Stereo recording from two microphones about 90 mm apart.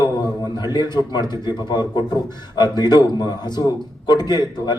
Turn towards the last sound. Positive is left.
turn(degrees=50)  # may be behind; listen again after turning